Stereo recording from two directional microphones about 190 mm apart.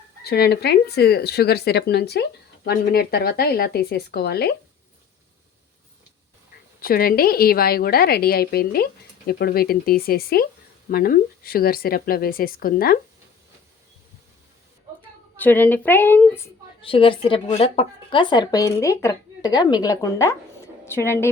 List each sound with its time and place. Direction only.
0.3 s speech: 55° left (ahead or behind)
6.8 s a woman's voice: 50° left (ahead or behind)
15.4 s a woman's voice: 10° left (ahead or behind)
16.8 s a woman's voice: 30° left (ahead or behind)